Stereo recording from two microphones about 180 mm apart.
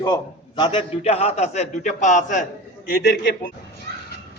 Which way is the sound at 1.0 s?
35° left (ahead or behind).